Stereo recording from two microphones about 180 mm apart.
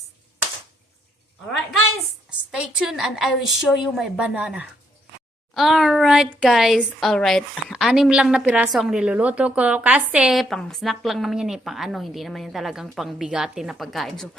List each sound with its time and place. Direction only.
2.5 s speech: 5° right (ahead or behind)